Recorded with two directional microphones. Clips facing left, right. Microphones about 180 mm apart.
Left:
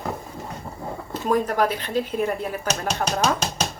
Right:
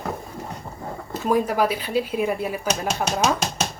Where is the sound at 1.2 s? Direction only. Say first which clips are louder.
Right 1 dB; 10° right (ahead or behind).